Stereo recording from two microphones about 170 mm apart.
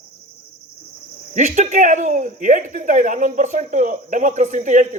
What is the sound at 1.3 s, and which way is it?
Speech, 45° right (ahead or behind).